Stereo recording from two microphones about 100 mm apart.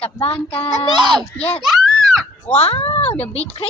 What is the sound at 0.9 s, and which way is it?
Speech, 45° right (ahead or behind).